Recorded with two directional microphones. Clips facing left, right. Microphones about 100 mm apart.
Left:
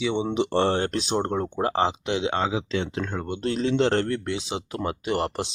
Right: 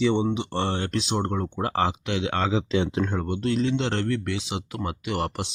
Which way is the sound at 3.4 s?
35° left (ahead or behind).